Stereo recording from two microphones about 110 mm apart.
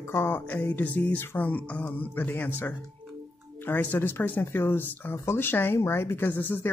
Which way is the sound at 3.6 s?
15° left (ahead or behind).